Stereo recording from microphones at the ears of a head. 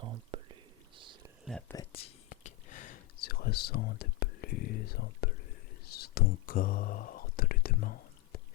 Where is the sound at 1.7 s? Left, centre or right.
Left.